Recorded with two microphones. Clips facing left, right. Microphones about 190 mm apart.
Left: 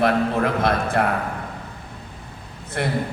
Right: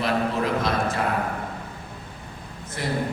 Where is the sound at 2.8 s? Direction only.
65° left (ahead or behind).